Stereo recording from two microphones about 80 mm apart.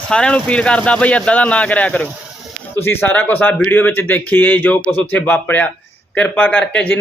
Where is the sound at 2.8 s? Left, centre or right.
Left.